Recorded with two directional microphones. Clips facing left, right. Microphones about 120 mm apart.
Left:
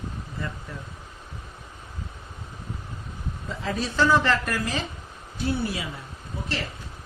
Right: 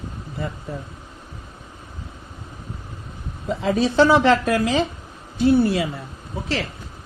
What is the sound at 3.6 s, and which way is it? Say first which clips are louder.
Speech: right 8 dB; 85° right.